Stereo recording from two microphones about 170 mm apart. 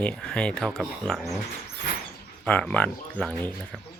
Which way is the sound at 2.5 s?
5° left (ahead or behind).